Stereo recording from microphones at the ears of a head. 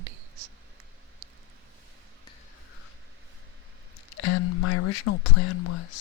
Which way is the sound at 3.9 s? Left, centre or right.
Left.